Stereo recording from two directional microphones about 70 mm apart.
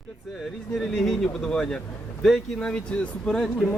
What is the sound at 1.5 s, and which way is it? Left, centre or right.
Speech, centre.